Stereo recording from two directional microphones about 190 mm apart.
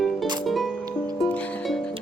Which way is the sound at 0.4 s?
Centre (ahead or behind).